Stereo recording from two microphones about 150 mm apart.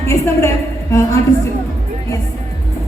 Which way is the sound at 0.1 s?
20° left (ahead or behind).